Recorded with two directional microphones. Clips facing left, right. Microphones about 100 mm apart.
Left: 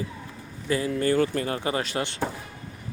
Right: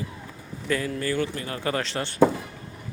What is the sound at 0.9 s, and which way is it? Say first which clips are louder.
Speech: left 4 dB; 35° left (ahead or behind).